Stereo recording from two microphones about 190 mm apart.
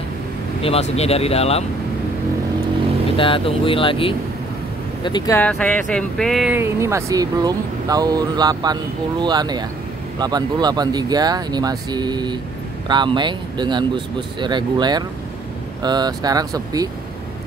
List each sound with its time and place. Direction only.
0.6 s speech: 30° left (ahead or behind)
3.2 s speech: 25° left (ahead or behind)
5.4 s speech: 5° left (ahead or behind)
6.6 s speech: 15° right (ahead or behind)